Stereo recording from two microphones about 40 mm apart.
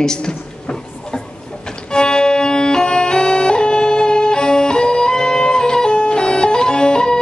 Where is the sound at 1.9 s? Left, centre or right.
Centre.